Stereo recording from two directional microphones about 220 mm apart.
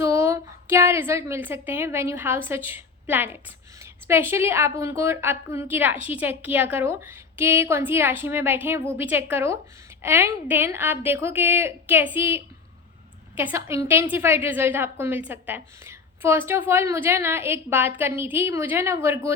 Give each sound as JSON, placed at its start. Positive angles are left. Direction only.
{"t": 0.0, "sound": "a woman's voice", "side_deg": -10}